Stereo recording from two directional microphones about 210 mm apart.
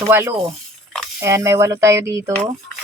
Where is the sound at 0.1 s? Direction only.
10° right (ahead or behind).